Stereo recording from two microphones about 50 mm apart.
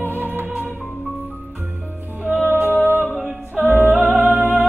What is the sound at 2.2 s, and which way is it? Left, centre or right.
Music, right.